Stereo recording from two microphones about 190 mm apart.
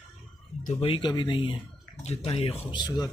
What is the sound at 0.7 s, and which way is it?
Speech, 25° left (ahead or behind).